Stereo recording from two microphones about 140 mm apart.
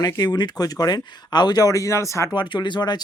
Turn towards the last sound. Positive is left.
turn(degrees=30)  # may be behind; listen again after turning